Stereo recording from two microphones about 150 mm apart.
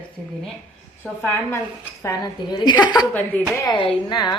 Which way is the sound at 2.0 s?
30° left (ahead or behind).